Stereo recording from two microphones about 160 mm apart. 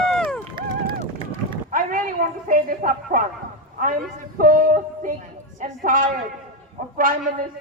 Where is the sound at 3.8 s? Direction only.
55° right (ahead or behind).